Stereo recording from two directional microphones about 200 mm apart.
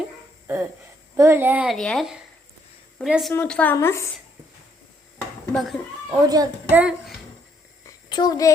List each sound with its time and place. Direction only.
0.4 s music: 10° right (ahead or behind)
1.1 s a woman's voice: 15° right (ahead or behind); by 4.1 s 15° left (ahead or behind)
5.5 s a child's voice: centre (ahead or behind)
6.2 s a woman's voice: 20° right (ahead or behind)
7.9 s a sound: 20° left (ahead or behind)